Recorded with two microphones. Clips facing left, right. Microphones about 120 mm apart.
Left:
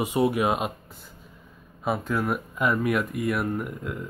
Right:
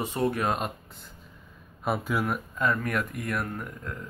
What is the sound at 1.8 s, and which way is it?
Speech, 5° right (ahead or behind).